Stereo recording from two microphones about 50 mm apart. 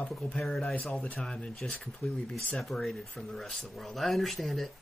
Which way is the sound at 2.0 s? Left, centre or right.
Left.